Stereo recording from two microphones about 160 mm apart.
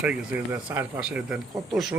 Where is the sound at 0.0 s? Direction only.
10° right (ahead or behind).